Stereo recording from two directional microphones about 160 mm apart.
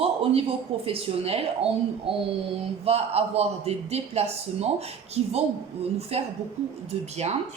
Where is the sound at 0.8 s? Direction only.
35° right (ahead or behind).